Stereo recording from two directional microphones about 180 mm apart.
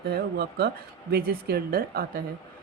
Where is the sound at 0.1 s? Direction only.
60° right (ahead or behind).